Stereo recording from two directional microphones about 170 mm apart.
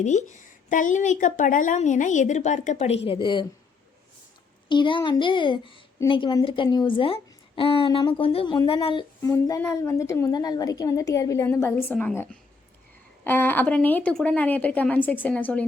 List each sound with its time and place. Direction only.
0.0 s a woman's voice: 45° left (ahead or behind); by 3.4 s 30° left (ahead or behind)
4.7 s a woman's voice: 30° left (ahead or behind)
9.2 s a woman's voice: 15° left (ahead or behind)